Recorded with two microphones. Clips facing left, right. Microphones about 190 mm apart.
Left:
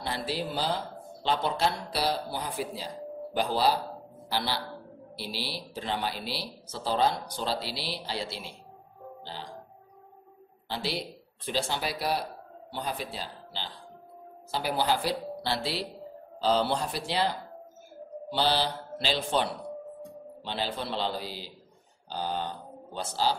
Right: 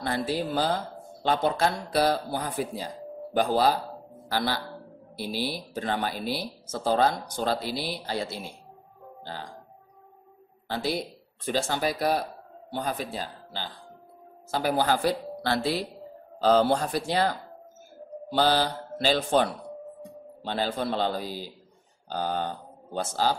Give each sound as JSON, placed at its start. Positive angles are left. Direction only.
{"t": 0.0, "sound": "a man's voice", "side_deg": -45}
{"t": 10.7, "sound": "speech", "side_deg": -50}